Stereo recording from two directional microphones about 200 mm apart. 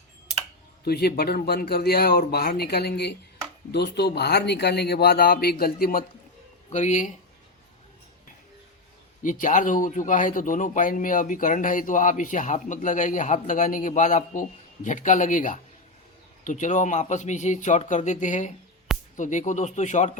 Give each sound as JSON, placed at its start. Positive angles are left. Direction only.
{"t": 0.9, "sound": "speech", "side_deg": 50}
{"t": 9.2, "sound": "speech", "side_deg": 40}